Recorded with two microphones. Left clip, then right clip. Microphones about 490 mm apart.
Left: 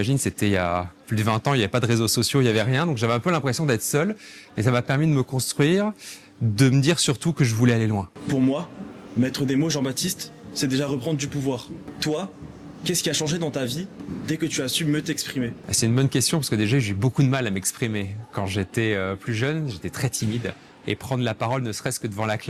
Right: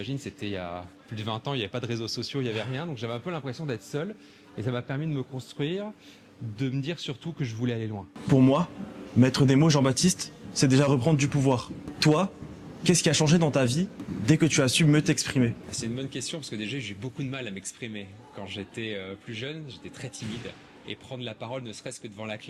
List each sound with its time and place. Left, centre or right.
0.0 s speech: left
8.4 s speech: right
15.7 s speech: left